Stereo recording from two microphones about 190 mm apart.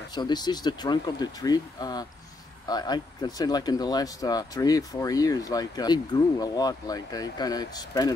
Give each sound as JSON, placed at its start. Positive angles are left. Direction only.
{"t": 0.1, "sound": "speech", "side_deg": 20}